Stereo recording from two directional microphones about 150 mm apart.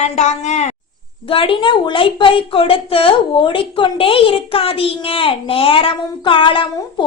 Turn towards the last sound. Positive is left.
turn(degrees=35)  # may be behind; listen again after turning